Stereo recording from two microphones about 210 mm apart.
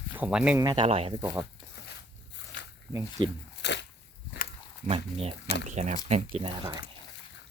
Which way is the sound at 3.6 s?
55° left (ahead or behind).